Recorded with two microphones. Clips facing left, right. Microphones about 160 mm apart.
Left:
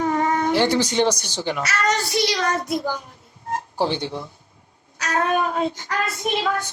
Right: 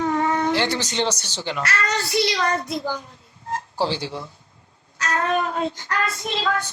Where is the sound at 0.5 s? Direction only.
10° left (ahead or behind).